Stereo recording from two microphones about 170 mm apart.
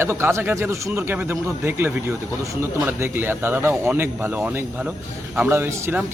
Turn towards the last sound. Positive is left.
turn(degrees=-15)  # may be behind; listen again after turning